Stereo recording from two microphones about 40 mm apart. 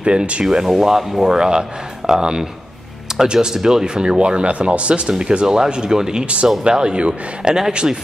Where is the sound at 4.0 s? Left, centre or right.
Right.